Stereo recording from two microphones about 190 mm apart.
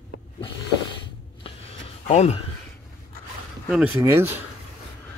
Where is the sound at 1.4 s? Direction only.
35° left (ahead or behind).